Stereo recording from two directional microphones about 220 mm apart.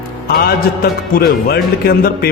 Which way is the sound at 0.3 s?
45° left (ahead or behind).